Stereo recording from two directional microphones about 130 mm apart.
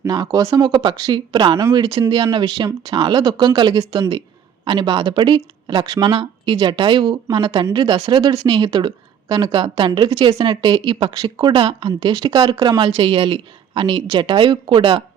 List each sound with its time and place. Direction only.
0.0 s speech: 25° right (ahead or behind); by 15.0 s 40° right (ahead or behind)